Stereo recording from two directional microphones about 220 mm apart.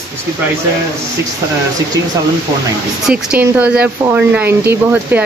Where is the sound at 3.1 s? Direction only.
5° right (ahead or behind).